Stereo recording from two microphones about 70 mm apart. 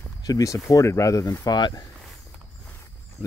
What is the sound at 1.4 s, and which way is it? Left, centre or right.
Speech, left.